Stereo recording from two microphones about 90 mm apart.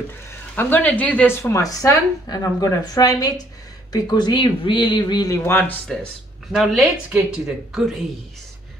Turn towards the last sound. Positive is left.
turn(degrees=-5)  # may be behind; listen again after turning